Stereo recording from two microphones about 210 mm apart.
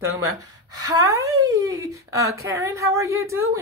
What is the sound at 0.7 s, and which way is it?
Speech, 20° right (ahead or behind).